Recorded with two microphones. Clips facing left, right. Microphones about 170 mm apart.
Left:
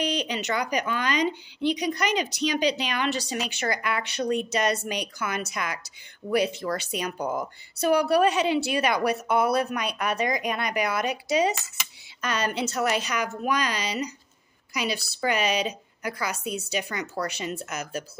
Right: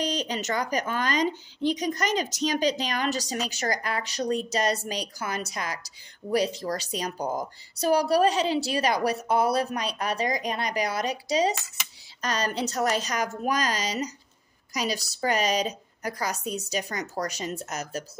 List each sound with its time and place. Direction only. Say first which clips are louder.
0.0 s speech: left 1 dB; 40° right (ahead or behind)